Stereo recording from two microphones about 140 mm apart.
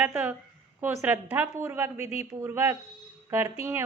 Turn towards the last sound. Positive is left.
turn(degrees=-15)  # may be behind; listen again after turning